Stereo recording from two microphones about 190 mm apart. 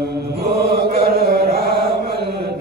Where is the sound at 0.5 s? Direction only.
55° right (ahead or behind).